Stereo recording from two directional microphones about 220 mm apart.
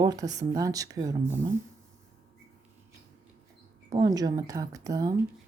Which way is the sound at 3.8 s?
15° right (ahead or behind).